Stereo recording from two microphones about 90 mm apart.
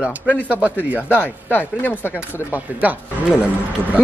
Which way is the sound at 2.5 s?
20° right (ahead or behind).